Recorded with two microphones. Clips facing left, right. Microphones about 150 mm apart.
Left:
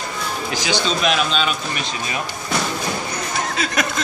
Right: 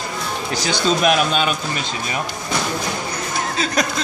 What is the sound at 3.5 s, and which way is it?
Chuckle, 35° right (ahead or behind).